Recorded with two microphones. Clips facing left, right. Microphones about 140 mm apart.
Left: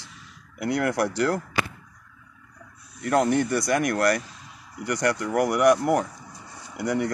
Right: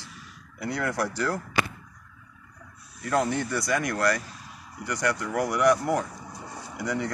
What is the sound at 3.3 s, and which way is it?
Speech, 60° left (ahead or behind).